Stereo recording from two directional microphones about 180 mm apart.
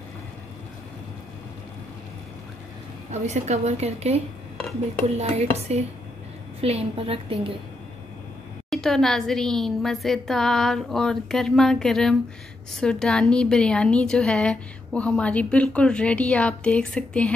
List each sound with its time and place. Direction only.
3.1 s a woman's voice: 40° right (ahead or behind)
4.6 s speech: 5° left (ahead or behind)
5.0 s a woman's voice: 35° right (ahead or behind)
8.6 s a woman's voice: centre (ahead or behind)